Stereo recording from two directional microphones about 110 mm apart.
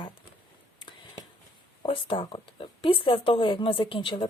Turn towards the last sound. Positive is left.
turn(degrees=50)  # may be behind; listen again after turning